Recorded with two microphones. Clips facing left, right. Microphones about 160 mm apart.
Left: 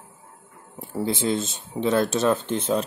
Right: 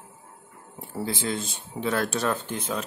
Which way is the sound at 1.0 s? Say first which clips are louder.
Left 5 dB; 25° left (ahead or behind).